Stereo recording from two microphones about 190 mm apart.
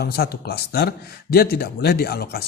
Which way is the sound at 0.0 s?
55° left (ahead or behind).